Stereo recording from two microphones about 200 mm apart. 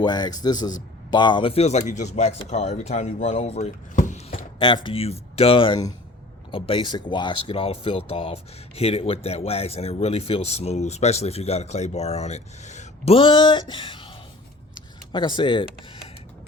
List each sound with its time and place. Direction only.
0.0 s a man's voice: 20° left (ahead or behind)
15.1 s a man's voice: 25° left (ahead or behind)